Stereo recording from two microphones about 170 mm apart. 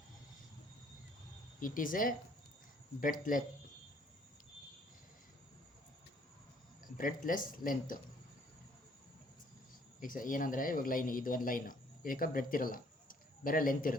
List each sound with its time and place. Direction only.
1.6 s speech: 55° left (ahead or behind)
6.8 s a sound: 55° left (ahead or behind)
7.3 s speech: 55° left (ahead or behind)
10.0 s a man's voice: 55° left (ahead or behind)